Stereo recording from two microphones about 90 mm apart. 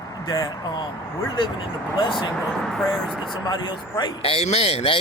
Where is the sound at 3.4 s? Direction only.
55° left (ahead or behind).